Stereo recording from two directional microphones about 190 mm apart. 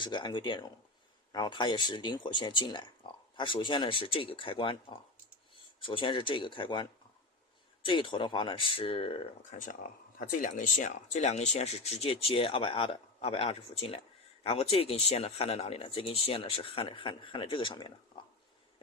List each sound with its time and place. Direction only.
0.0 s speech: 25° left (ahead or behind)